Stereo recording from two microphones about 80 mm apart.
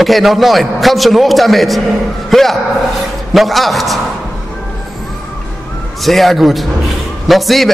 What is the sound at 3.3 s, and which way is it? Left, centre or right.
Speech, centre.